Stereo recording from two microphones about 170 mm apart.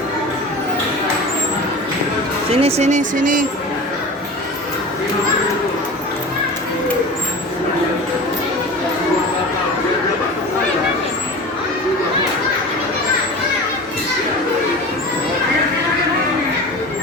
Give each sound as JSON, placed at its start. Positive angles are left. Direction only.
{"t": 2.6, "sound": "speech", "side_deg": -35}